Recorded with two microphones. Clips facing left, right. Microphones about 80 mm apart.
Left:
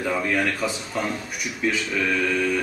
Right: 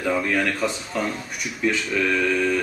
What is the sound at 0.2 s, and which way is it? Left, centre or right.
A man's voice, centre.